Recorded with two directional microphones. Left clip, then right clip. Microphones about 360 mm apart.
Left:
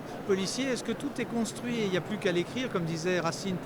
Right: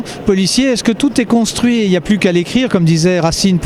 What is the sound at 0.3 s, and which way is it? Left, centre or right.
Speech, right.